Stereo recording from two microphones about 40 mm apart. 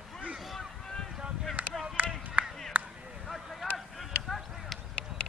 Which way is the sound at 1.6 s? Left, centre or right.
Right.